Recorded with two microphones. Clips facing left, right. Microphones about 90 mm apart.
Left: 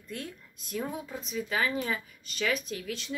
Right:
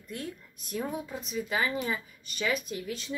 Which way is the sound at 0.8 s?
10° right (ahead or behind).